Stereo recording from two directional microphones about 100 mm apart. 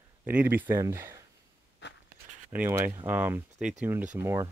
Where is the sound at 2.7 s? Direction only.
25° right (ahead or behind).